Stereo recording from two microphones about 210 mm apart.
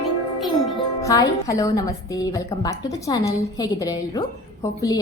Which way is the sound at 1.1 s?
15° left (ahead or behind).